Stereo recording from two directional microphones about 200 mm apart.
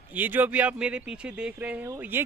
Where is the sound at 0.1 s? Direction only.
10° right (ahead or behind).